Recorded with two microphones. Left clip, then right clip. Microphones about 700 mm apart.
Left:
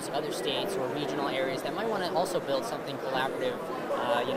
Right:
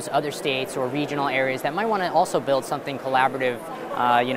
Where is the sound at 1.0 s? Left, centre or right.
Right.